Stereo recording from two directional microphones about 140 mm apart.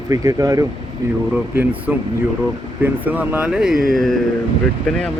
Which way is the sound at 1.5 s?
10° right (ahead or behind).